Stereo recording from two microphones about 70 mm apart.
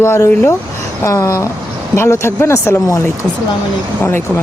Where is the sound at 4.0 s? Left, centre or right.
Left.